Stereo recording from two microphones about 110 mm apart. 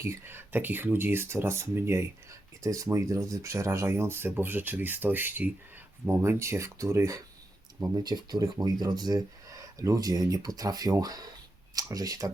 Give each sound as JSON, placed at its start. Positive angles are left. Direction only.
{"t": 0.0, "sound": "speech", "side_deg": -25}
{"t": 7.9, "sound": "speech", "side_deg": -40}